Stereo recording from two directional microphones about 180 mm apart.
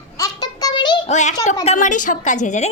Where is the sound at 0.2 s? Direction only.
20° left (ahead or behind).